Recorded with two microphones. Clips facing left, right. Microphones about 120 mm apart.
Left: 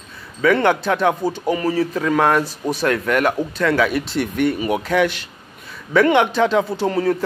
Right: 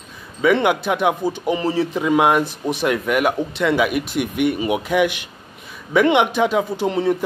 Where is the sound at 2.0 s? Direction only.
15° right (ahead or behind).